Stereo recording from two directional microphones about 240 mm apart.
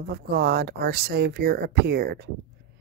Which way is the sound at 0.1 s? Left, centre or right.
Right.